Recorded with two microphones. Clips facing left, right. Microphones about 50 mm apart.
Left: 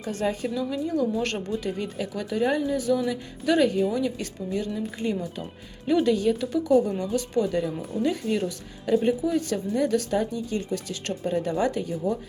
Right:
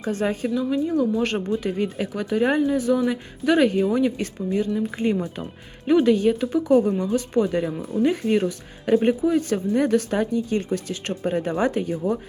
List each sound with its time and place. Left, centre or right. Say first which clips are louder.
0.0 s speech: right 3 dB; right
0.4 s a woman's voice: right 5 dB; centre
5.0 s a woman's voice: right 3 dB; right